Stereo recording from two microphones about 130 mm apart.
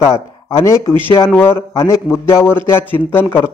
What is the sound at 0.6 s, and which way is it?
A man's voice, 20° left (ahead or behind).